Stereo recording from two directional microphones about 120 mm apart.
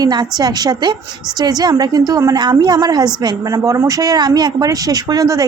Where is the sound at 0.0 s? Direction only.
35° right (ahead or behind).